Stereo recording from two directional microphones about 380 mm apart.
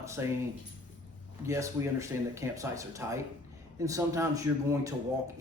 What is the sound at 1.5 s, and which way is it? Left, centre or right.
Speech, centre.